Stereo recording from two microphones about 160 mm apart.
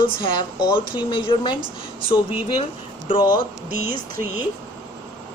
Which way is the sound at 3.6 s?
65° right (ahead or behind).